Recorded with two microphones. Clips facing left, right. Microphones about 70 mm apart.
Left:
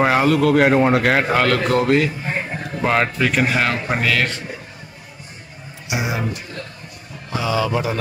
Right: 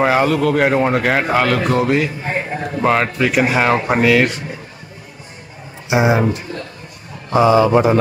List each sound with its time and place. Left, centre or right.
0.0 s a man's voice: centre
5.9 s speech: right
7.3 s speech: right